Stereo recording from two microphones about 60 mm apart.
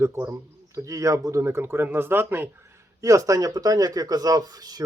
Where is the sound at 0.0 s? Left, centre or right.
Right.